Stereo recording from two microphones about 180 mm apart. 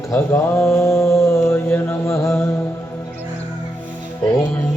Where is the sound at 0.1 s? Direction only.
10° left (ahead or behind).